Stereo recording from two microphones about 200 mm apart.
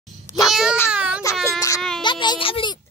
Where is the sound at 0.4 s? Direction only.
Centre (ahead or behind).